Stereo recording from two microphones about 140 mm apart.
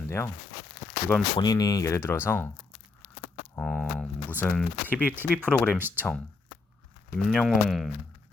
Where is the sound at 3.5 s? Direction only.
10° left (ahead or behind).